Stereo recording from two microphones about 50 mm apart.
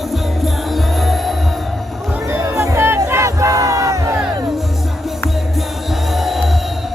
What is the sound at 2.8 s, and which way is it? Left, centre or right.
Crowd, right.